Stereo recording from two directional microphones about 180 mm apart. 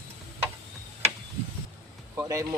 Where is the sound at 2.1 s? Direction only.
20° right (ahead or behind).